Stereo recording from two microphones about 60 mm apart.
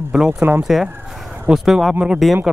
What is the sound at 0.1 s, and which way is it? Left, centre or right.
Speech, centre.